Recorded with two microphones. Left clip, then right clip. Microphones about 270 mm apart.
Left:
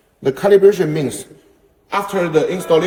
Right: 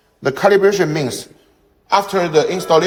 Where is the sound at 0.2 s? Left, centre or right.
Right.